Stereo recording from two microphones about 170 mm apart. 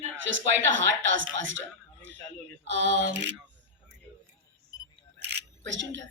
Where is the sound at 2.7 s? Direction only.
90° right.